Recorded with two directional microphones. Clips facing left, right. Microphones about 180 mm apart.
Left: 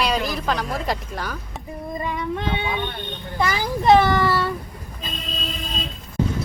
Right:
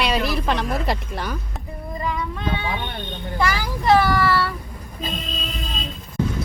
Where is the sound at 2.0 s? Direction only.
25° left (ahead or behind).